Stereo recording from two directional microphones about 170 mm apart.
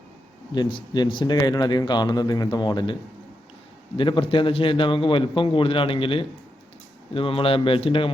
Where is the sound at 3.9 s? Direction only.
30° left (ahead or behind).